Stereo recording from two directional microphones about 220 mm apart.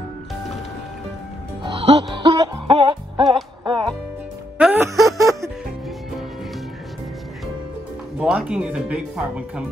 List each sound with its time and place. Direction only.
1.6 s music: 25° right (ahead or behind)
4.6 s music: 5° right (ahead or behind)
8.2 s speech: 5° right (ahead or behind)